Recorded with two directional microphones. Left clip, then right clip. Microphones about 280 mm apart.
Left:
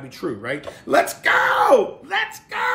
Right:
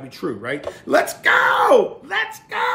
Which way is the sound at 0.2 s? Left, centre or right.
Centre.